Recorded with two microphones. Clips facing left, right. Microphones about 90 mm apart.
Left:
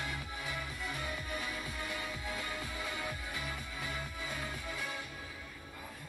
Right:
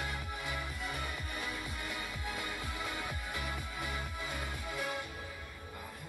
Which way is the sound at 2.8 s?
15° right (ahead or behind).